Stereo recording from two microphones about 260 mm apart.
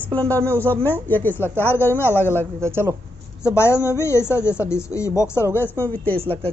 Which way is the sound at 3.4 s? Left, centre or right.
Centre.